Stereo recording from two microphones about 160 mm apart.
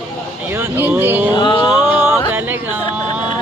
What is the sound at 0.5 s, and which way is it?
Speech, 15° right (ahead or behind).